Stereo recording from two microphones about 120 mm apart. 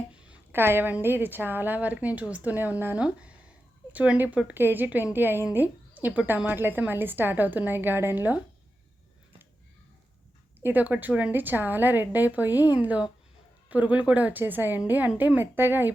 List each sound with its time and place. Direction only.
0.1 s a sound: 15° right (ahead or behind)
1.0 s a woman's voice: 15° right (ahead or behind)
10.6 s a woman's voice: 15° right (ahead or behind)